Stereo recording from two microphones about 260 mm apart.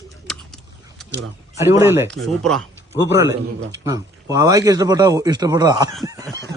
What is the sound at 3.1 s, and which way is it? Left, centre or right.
A man's voice, centre.